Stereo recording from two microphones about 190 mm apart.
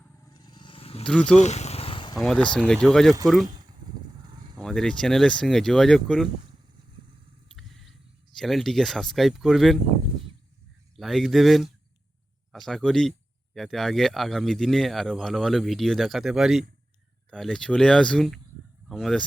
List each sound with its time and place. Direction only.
0.3 s vehicle: 25° left (ahead or behind)
1.0 s speech: 5° left (ahead or behind)
1.4 s vehicle: 35° left (ahead or behind)
2.1 s speech: centre (ahead or behind)
3.4 s a sound: 20° right (ahead or behind)
4.5 s speech: centre (ahead or behind)
7.5 s a sound: centre (ahead or behind)
8.4 s speech: centre (ahead or behind)
10.9 s speech: centre (ahead or behind)